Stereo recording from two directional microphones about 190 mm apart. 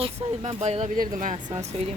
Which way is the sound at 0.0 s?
35° right (ahead or behind).